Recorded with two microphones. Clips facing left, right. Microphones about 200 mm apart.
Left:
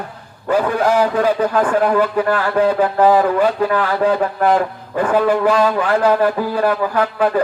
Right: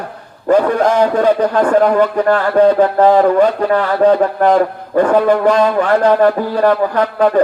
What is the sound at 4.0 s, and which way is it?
Speech, 40° right (ahead or behind).